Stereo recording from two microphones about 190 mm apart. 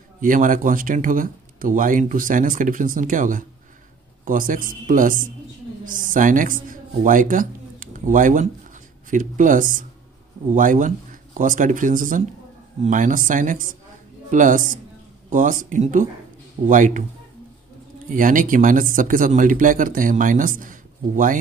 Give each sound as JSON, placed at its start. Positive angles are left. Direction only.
{"t": 0.2, "sound": "a man's voice", "side_deg": -45}
{"t": 18.1, "sound": "speech", "side_deg": -45}